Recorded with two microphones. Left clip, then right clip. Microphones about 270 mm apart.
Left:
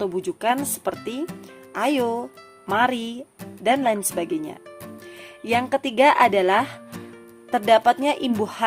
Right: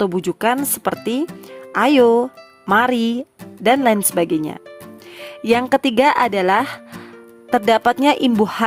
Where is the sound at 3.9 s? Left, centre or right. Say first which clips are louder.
Right 6 dB; right.